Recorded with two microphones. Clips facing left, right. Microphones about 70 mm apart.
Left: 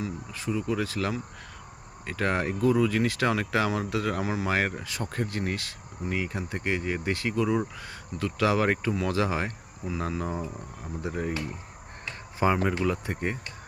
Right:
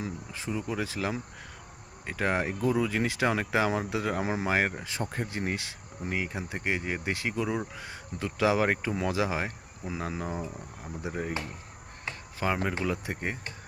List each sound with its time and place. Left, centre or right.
0.0 s speech: right
4.4 s speech: centre
12.4 s speech: centre
12.8 s speech: centre